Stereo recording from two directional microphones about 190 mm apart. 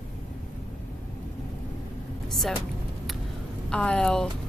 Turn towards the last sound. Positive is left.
turn(degrees=5)  # may be behind; listen again after turning